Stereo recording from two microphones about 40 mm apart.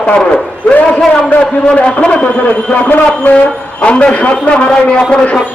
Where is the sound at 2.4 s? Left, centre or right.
Left.